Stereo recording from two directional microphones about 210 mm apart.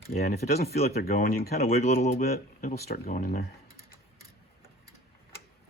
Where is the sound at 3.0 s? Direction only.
40° left (ahead or behind).